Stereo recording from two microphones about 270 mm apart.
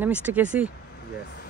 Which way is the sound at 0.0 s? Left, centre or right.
Centre.